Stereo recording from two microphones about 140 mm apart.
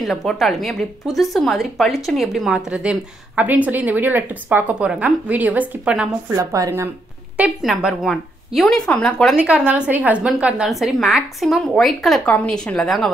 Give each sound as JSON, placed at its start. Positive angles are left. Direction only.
{"t": 0.0, "sound": "a woman's voice", "side_deg": 0}
{"t": 6.3, "sound": "a woman's voice", "side_deg": -25}
{"t": 7.3, "sound": "a woman's voice", "side_deg": -5}